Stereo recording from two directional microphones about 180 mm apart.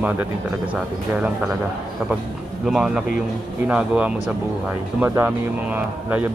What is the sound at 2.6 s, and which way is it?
Speech, 5° right (ahead or behind).